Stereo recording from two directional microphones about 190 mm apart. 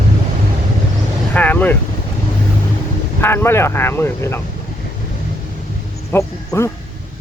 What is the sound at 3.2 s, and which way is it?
Speech, 10° left (ahead or behind).